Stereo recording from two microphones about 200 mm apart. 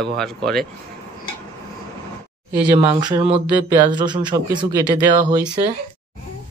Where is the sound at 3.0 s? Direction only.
20° right (ahead or behind).